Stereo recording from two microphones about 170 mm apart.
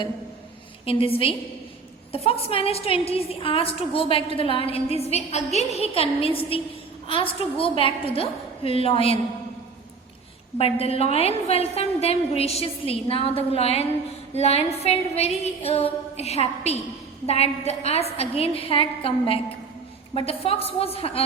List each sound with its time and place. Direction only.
0.9 s a woman's voice: 35° left (ahead or behind)
10.6 s a woman's voice: 35° left (ahead or behind)